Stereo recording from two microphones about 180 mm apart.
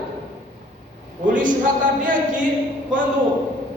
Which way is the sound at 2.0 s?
45° right (ahead or behind).